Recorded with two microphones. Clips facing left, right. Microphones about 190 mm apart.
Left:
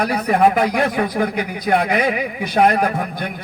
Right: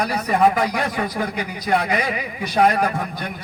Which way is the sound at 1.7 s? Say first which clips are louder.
Left 3 dB; 55° left (ahead or behind).